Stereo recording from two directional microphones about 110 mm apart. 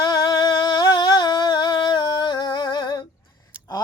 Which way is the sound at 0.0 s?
40° left (ahead or behind).